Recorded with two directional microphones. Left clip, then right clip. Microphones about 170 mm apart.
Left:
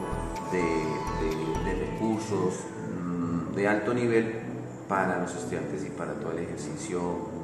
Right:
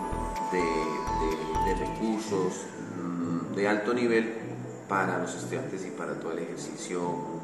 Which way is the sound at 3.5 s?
5° left (ahead or behind).